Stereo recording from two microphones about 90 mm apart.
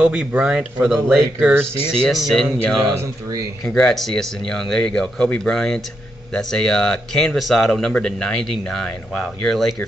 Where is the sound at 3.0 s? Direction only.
40° right (ahead or behind).